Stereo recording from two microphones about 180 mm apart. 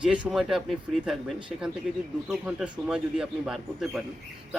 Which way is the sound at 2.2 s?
5° right (ahead or behind).